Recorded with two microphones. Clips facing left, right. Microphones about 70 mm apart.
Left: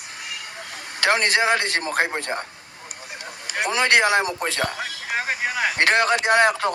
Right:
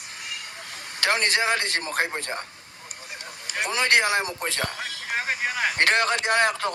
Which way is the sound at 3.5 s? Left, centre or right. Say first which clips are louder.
Left 4 dB; left.